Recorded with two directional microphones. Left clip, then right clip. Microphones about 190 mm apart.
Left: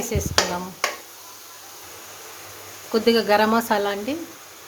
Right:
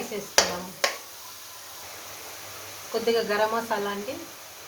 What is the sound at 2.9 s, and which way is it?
Speech, 60° left (ahead or behind).